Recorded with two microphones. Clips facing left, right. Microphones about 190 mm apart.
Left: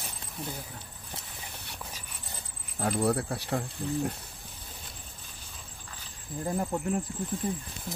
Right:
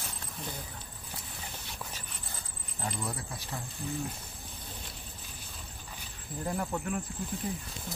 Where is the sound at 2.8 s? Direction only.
65° left (ahead or behind).